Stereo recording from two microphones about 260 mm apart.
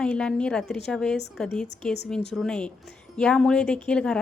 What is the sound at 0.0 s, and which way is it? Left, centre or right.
A woman's voice, centre.